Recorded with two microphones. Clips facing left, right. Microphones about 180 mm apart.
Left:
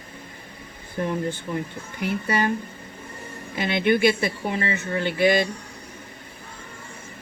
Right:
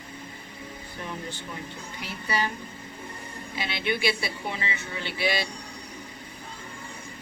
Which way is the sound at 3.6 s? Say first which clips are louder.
Left 9 dB; 50° left (ahead or behind).